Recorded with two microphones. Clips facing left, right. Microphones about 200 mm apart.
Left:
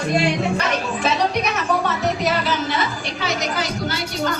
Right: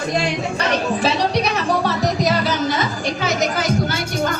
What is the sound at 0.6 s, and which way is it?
Music, 35° right (ahead or behind).